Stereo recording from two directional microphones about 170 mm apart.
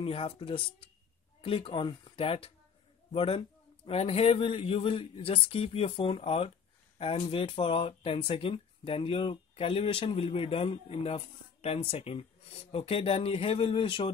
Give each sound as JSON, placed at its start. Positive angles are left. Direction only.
{"t": 0.0, "sound": "speech", "side_deg": 35}